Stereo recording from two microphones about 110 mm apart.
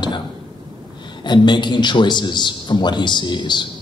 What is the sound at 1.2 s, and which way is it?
Speech, 45° left (ahead or behind).